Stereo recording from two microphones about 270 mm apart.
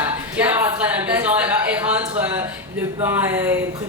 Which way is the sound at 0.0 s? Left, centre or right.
Centre.